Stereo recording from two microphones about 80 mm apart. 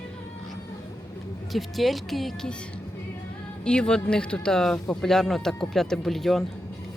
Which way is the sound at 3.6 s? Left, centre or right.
Centre.